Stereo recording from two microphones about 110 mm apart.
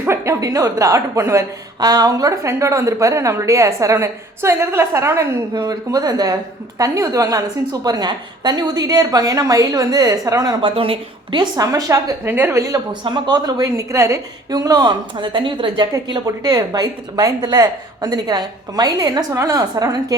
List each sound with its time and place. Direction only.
0.0 s a woman's voice: 25° right (ahead or behind)
10.6 s a woman's voice: 50° right (ahead or behind)
11.6 s speech: 30° right (ahead or behind)
13.1 s a woman's voice: 40° right (ahead or behind)